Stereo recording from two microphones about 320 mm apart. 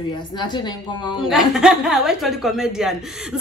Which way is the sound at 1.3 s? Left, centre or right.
Centre.